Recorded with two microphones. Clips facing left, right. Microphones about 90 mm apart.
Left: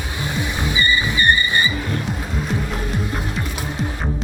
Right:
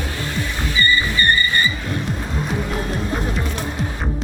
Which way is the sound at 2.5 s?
Centre (ahead or behind).